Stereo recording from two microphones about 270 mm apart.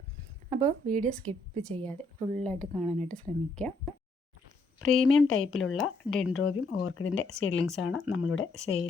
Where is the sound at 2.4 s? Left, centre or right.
Centre.